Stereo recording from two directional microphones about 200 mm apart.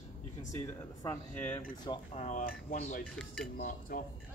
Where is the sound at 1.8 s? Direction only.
20° left (ahead or behind).